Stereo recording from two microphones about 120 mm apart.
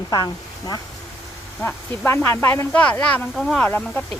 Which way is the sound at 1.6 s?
20° left (ahead or behind).